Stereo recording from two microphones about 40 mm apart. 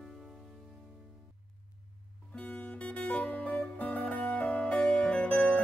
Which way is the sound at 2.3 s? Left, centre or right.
Left.